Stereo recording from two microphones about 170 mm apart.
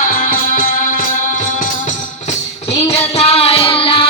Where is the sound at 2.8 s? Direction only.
35° left (ahead or behind).